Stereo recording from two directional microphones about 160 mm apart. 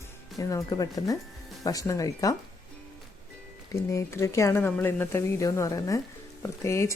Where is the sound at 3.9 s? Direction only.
20° left (ahead or behind).